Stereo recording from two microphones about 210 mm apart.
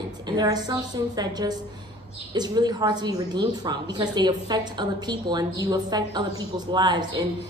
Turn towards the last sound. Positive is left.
turn(degrees=-20)  # may be behind; listen again after turning